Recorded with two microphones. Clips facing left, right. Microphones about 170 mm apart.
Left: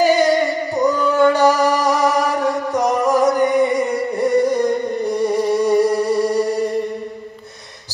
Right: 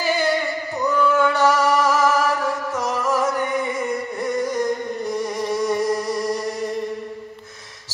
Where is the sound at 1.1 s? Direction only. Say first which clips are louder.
Left 6 dB; 35° left (ahead or behind).